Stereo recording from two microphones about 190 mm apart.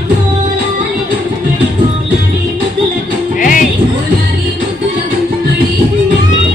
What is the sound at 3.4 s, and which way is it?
Music, 45° left (ahead or behind).